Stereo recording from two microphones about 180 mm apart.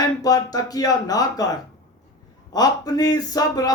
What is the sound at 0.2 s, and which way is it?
Speech, 20° left (ahead or behind).